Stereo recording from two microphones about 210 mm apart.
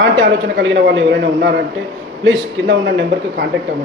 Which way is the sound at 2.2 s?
65° right (ahead or behind).